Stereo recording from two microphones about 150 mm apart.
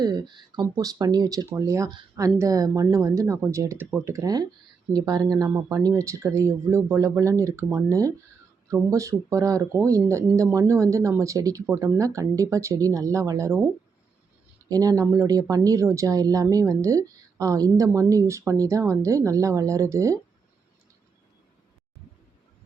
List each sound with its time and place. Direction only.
0.0 s speech: 25° right (ahead or behind)
14.7 s speech: 25° right (ahead or behind)